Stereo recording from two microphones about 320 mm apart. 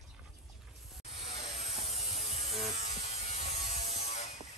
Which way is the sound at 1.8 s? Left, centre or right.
Centre.